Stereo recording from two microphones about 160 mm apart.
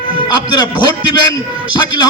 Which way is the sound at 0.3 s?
25° left (ahead or behind).